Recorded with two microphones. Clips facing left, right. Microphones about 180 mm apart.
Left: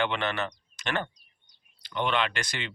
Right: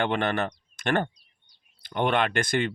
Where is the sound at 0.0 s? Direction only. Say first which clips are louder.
Right 3 dB; 50° right (ahead or behind).